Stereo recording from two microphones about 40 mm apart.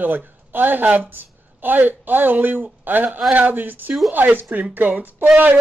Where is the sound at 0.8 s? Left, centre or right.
Right.